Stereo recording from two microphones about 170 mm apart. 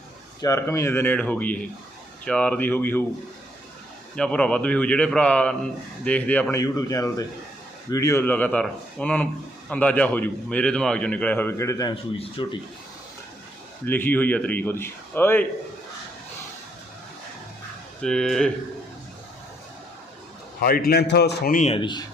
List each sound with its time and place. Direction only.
0.4 s a man's voice: 15° left (ahead or behind)
4.1 s a man's voice: 5° left (ahead or behind)
12.1 s speech: 30° left (ahead or behind)
13.8 s a man's voice: 10° left (ahead or behind)
18.0 s speech: 5° left (ahead or behind)
20.6 s a man's voice: 60° left (ahead or behind)
21.6 s speech: 30° left (ahead or behind)